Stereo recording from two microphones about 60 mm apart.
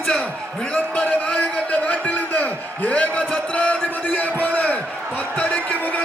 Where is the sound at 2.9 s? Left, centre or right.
Left.